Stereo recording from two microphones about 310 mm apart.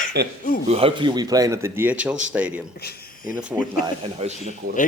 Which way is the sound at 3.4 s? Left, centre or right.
Centre.